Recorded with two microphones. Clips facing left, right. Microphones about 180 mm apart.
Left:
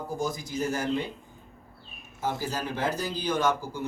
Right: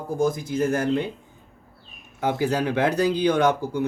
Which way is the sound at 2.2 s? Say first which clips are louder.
Right 8 dB; 65° right (ahead or behind).